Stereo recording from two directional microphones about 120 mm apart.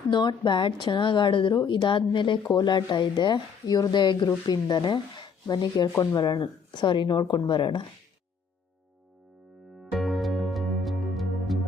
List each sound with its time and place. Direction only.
0.1 s speech: 40° left (ahead or behind)
9.8 s music: centre (ahead or behind)